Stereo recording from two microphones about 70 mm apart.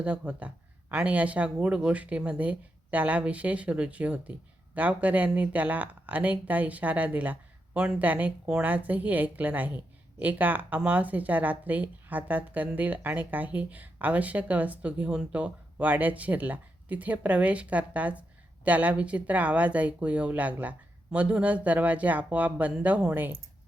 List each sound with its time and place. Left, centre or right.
0.0 s speech: centre